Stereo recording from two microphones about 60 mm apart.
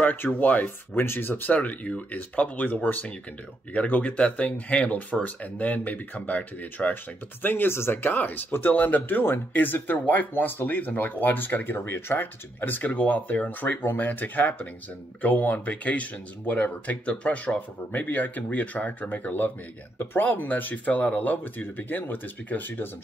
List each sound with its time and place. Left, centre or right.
0.0 s speech: left
0.9 s speech: left
7.4 s speech: left